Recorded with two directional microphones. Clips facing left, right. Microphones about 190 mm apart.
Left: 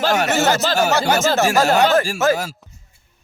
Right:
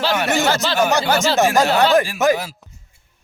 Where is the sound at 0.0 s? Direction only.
45° left (ahead or behind).